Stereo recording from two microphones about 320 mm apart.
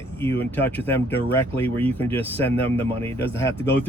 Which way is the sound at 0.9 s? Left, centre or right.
Centre.